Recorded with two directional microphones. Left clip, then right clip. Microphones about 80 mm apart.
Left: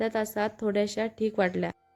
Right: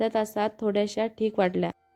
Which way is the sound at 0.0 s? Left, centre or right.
Right.